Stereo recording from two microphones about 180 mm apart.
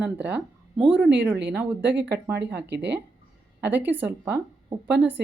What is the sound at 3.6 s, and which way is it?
Speech, 10° right (ahead or behind).